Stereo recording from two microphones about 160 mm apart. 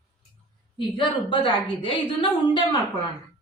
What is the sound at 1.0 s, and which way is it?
A woman's voice, 30° left (ahead or behind).